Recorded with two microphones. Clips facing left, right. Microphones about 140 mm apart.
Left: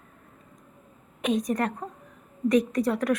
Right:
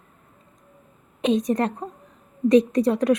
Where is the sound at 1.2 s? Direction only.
25° right (ahead or behind).